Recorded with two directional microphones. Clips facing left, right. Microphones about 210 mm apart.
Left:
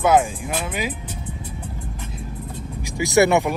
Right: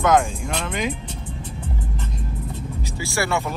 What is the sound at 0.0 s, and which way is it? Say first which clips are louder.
Speech: left 1 dB; 5° left (ahead or behind).